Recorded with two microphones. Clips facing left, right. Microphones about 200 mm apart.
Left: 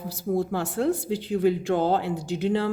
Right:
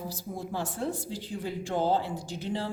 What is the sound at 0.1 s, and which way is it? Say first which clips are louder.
A woman's voice: left 10 dB; 65° left (ahead or behind).